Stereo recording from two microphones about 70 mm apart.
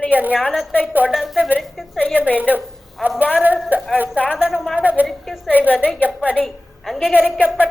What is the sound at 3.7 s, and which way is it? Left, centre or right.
Speech, right.